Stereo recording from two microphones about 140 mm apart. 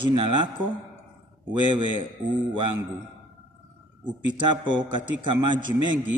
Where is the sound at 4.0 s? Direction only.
35° right (ahead or behind).